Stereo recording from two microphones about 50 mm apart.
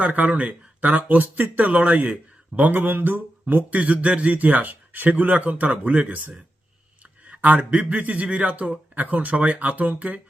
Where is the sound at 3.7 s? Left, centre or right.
Right.